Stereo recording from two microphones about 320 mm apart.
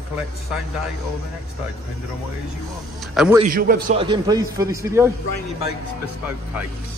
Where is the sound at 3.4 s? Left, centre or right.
Right; by 5.1 s centre.